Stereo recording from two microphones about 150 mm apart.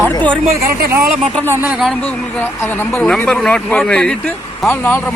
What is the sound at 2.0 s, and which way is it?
Speech, 10° left (ahead or behind).